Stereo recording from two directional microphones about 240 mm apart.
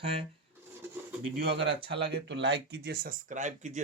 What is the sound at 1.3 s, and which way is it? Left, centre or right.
Speech, right.